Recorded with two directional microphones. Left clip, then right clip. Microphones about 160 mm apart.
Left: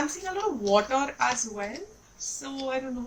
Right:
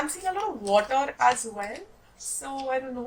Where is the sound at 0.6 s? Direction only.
30° right (ahead or behind).